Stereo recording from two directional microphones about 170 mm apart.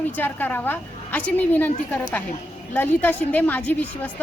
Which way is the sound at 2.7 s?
10° left (ahead or behind).